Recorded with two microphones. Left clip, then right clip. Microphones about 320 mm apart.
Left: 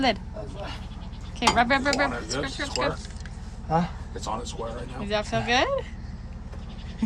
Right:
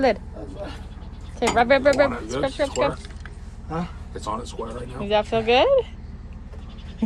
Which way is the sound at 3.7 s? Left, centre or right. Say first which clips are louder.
Left 5 dB; left.